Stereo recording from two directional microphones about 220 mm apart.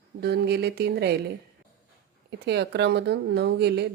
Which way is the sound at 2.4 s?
50° right (ahead or behind).